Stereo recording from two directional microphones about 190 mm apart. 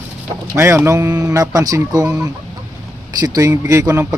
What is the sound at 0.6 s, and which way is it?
Speech, 15° right (ahead or behind).